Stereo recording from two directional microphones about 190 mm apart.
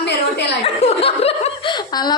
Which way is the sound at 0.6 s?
35° left (ahead or behind).